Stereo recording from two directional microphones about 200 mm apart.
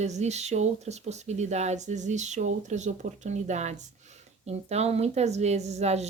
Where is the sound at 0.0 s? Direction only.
35° right (ahead or behind).